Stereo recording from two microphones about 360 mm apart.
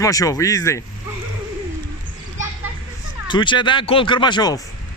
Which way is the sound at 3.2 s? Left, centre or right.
Centre.